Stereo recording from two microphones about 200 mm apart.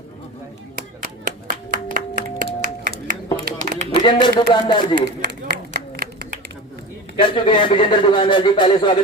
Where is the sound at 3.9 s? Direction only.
20° left (ahead or behind).